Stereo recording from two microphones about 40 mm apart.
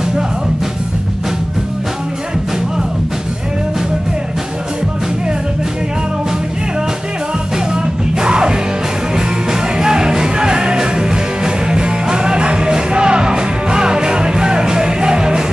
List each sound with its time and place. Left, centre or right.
7.7 s music: centre